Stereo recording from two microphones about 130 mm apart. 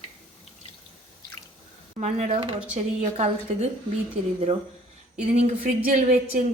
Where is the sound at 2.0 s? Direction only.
55° right (ahead or behind).